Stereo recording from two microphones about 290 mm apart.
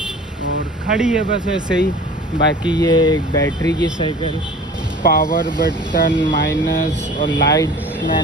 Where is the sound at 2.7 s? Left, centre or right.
Centre.